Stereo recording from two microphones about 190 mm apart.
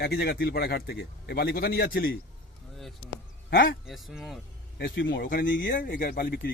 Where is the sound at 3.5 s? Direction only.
60° left (ahead or behind).